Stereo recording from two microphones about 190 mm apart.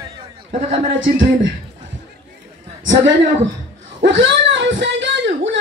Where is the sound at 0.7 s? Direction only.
80° right.